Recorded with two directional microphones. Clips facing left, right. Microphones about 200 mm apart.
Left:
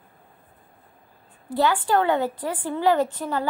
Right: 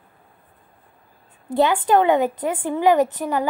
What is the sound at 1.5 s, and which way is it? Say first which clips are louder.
A woman's voice: right 4 dB; 20° right (ahead or behind).